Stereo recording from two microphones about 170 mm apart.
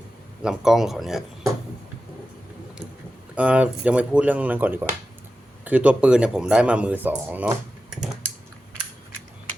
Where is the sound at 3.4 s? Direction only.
5° right (ahead or behind).